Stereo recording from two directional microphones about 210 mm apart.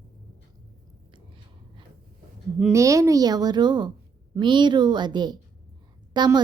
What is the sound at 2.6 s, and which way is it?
Speech, 5° right (ahead or behind).